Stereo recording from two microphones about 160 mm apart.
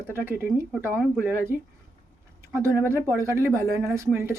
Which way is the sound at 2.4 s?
15° right (ahead or behind).